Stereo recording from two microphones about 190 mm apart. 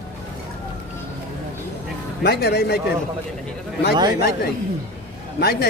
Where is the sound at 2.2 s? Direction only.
60° left (ahead or behind).